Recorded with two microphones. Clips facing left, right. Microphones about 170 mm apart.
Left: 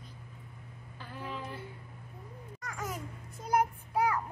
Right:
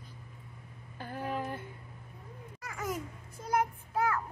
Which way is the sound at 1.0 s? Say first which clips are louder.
Right 5 dB; 50° right (ahead or behind).